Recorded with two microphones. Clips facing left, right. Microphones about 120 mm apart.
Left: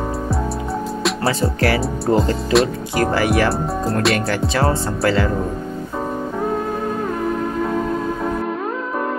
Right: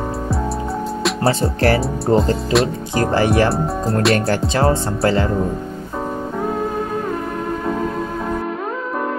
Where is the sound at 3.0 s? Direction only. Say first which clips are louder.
Right 1 dB; 30° right (ahead or behind).